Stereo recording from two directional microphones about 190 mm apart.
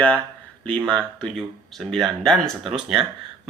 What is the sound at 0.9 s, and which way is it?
Speech, 5° left (ahead or behind).